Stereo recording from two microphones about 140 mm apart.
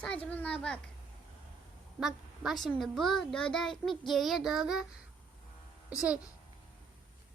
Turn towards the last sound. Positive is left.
turn(degrees=-5)  # may be behind; listen again after turning